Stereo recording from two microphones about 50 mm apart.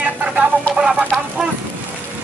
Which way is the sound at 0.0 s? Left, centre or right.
Right.